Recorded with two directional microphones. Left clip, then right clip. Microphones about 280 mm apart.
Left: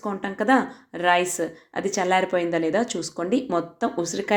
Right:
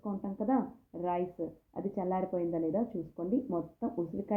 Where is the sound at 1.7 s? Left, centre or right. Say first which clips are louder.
Left 13 dB; left.